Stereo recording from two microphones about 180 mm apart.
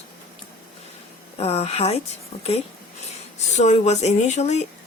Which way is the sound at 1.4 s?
35° left (ahead or behind).